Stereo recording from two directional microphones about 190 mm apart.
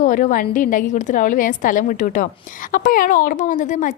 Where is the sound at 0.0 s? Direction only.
40° left (ahead or behind).